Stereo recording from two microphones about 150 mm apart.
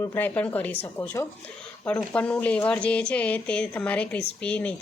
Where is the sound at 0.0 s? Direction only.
15° left (ahead or behind).